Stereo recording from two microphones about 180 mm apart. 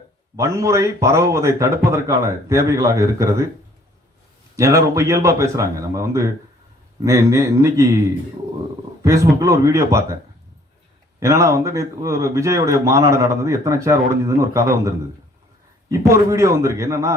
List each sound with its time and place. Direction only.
0.3 s speech: 15° right (ahead or behind)
4.5 s speech: 20° right (ahead or behind)
9.0 s speech: 15° right (ahead or behind)
11.2 s speech: 15° right (ahead or behind)